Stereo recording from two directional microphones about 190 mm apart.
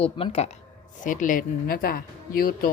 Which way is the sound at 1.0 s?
45° left (ahead or behind).